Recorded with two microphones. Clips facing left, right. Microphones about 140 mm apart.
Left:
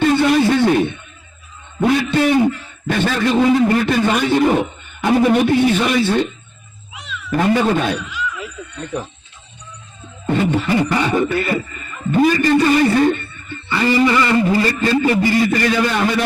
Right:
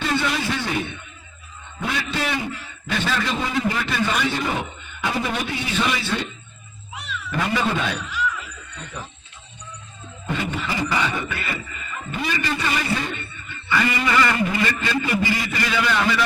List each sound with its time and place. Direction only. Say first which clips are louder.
0.0 s a sound: left 10 dB; 50° left (ahead or behind)
1.8 s a sound: left 11 dB; 45° left (ahead or behind)
2.9 s a man's voice: left 8 dB; 55° left (ahead or behind)
4.9 s beatboxing: left 11 dB; 50° left (ahead or behind)
7.3 s beatboxing: left 8 dB; 45° left (ahead or behind)
10.2 s beatboxing: left 9 dB; 40° left (ahead or behind)
12.1 s a man's voice: left 13 dB; 45° left (ahead or behind)
15.2 s beatboxing: left 9 dB; 45° left (ahead or behind)